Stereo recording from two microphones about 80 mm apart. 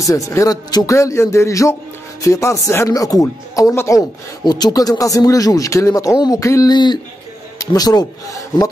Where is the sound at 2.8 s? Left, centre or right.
Left.